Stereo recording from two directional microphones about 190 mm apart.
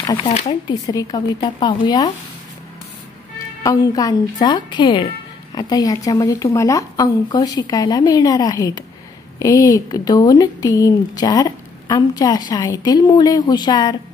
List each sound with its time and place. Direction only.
0.0 s speech: 25° left (ahead or behind)
0.3 s speech: 40° left (ahead or behind)
0.7 s speech: 20° left (ahead or behind)
3.6 s speech: 20° left (ahead or behind)